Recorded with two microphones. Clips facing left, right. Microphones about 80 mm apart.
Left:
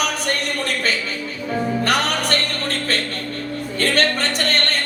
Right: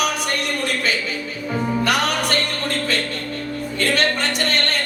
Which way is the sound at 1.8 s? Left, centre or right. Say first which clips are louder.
Even; left.